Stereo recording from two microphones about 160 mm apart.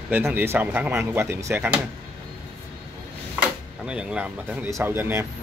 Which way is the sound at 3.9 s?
5° right (ahead or behind).